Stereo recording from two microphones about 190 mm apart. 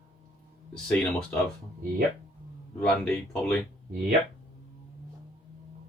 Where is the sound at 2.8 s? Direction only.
5° left (ahead or behind).